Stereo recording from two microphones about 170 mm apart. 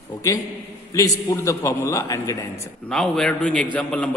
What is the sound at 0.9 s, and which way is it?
A man's voice, 20° left (ahead or behind).